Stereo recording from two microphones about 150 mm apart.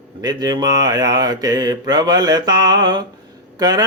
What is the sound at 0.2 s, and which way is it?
Mantra, 25° right (ahead or behind).